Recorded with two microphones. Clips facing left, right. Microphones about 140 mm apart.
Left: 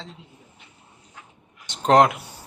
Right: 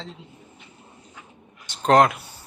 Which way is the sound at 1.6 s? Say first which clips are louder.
Even; 20° left (ahead or behind).